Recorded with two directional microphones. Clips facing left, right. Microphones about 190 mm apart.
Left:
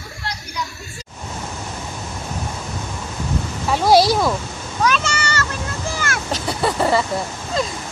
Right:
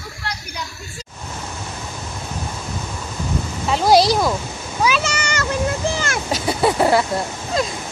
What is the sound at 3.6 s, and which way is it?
Speech, centre (ahead or behind).